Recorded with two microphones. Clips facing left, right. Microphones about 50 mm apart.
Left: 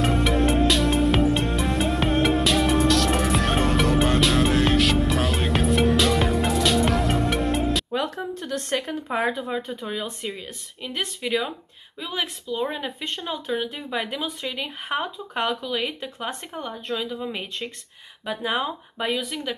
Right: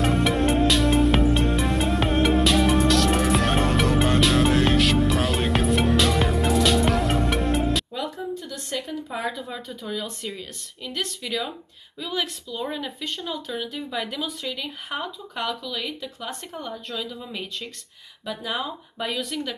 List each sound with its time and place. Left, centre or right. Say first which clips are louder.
0.0 s music: even; centre
7.9 s speech: left 3 dB; left
19.1 s speech: even; centre